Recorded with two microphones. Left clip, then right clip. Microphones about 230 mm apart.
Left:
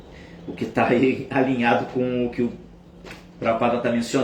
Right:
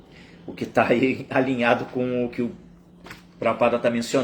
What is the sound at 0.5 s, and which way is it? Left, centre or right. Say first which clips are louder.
A man's voice: even; centre.